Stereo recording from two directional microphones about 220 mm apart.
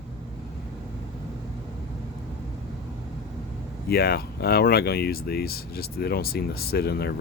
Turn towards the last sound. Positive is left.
turn(degrees=45)  # may be behind; listen again after turning